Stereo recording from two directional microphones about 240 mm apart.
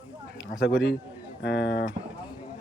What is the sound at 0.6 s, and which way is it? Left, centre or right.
A man's voice, left.